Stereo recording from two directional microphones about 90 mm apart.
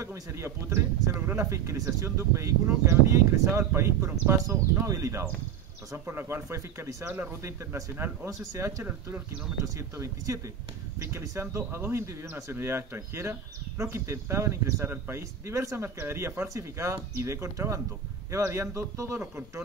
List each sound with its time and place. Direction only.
0.0 s speech: 35° right (ahead or behind)
8.5 s speech: 35° right (ahead or behind)